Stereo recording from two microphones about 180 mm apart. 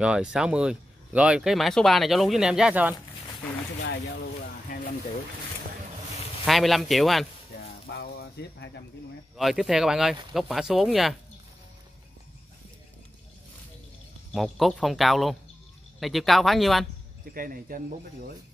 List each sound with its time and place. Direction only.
0.0 s speech: 5° right (ahead or behind)
3.8 s speech: 70° left (ahead or behind)
6.4 s speech: centre (ahead or behind)
8.0 s a sound: 65° left (ahead or behind)
9.4 s speech: centre (ahead or behind)
14.3 s speech: centre (ahead or behind)
17.3 s speech: 50° right (ahead or behind)